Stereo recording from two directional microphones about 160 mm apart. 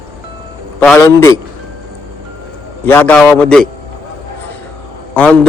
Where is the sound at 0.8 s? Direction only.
15° left (ahead or behind).